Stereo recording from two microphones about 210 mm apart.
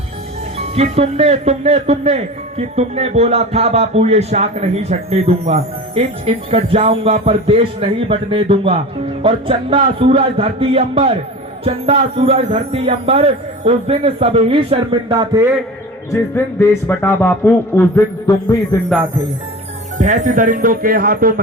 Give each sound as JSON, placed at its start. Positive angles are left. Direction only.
{"t": 0.8, "sound": "speech", "side_deg": -30}
{"t": 16.1, "sound": "a man's voice", "side_deg": 10}
{"t": 20.0, "sound": "speech", "side_deg": -35}